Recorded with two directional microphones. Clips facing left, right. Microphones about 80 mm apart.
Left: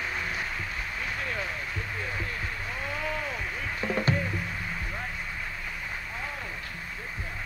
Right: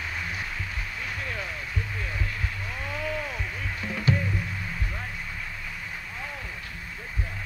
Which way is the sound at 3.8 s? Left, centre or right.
Left.